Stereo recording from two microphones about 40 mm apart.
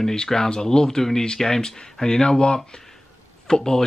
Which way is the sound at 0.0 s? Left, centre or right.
Centre.